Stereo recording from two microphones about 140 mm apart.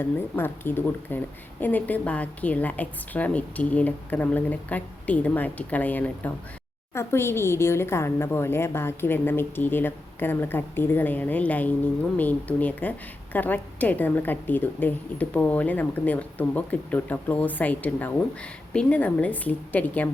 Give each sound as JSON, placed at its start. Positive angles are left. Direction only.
{"t": 0.0, "sound": "a woman's voice", "side_deg": 15}